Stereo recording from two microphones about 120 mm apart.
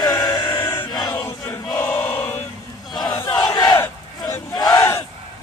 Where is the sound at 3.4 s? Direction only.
35° left (ahead or behind).